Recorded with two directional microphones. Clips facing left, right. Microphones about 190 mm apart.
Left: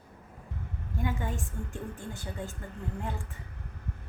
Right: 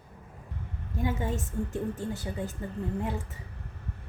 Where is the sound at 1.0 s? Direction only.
20° right (ahead or behind).